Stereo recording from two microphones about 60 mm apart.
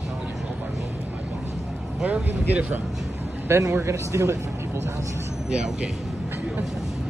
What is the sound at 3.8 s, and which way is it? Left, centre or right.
Speech, right.